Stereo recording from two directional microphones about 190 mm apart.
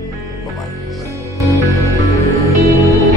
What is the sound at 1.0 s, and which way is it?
Music, 15° right (ahead or behind).